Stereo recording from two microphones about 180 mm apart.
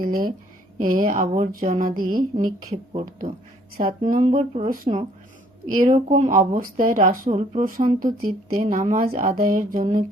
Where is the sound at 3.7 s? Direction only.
50° right (ahead or behind).